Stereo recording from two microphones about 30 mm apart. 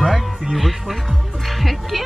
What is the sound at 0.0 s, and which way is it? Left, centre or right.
Music, centre.